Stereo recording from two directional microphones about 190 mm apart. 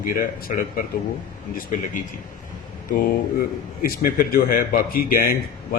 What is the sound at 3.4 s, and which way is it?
A man's voice, 50° left (ahead or behind).